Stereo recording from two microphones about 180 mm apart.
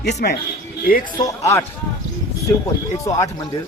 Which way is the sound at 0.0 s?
70° left (ahead or behind).